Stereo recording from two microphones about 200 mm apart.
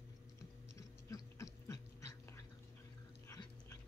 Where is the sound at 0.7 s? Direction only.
15° left (ahead or behind).